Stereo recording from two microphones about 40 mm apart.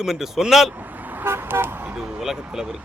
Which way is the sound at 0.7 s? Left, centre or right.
Right.